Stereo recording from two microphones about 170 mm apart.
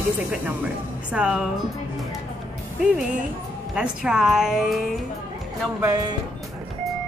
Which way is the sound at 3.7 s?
5° right (ahead or behind).